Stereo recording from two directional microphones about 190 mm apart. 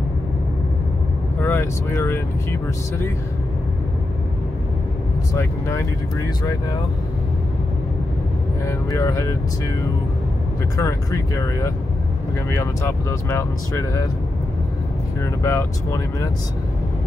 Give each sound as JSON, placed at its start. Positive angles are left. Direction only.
{"t": 1.4, "sound": "speech", "side_deg": 10}
{"t": 5.3, "sound": "speech", "side_deg": 15}
{"t": 8.6, "sound": "speech", "side_deg": 15}
{"t": 10.8, "sound": "speech", "side_deg": 15}
{"t": 15.4, "sound": "speech", "side_deg": 15}